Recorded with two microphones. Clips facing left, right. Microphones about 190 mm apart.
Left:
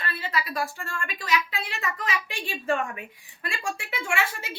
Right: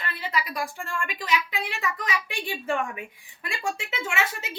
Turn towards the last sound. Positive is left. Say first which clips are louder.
# even
turn(degrees=-20)  # may be behind; listen again after turning